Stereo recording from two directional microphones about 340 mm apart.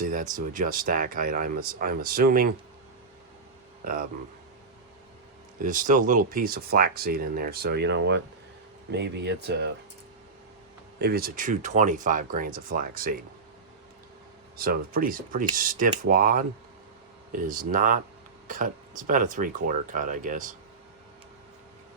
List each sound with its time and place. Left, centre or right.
0.0 s speech: right
5.6 s speech: right
11.0 s speech: right
14.5 s speech: right